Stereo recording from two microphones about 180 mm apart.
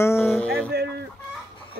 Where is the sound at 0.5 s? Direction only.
65° right (ahead or behind).